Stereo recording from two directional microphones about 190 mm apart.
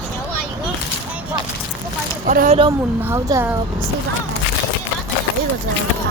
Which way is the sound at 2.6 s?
20° right (ahead or behind).